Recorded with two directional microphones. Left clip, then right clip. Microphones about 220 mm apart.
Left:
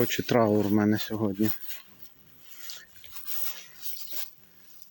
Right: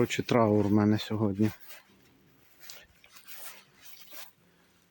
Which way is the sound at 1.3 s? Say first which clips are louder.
Left 1 dB; 50° left (ahead or behind).